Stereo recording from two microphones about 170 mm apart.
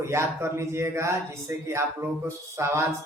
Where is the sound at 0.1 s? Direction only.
15° right (ahead or behind).